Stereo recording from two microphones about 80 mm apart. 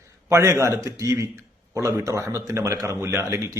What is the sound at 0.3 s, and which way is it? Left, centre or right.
A man's voice, right.